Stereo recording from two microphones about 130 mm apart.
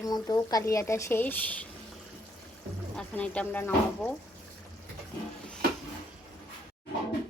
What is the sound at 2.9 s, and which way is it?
Speech, 10° left (ahead or behind).